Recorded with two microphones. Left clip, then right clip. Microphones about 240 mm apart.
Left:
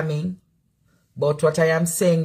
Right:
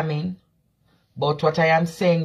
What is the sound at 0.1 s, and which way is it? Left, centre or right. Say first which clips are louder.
Speech: even; centre.